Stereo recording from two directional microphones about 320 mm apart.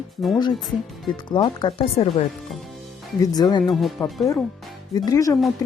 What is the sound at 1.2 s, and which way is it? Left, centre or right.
Speech, centre.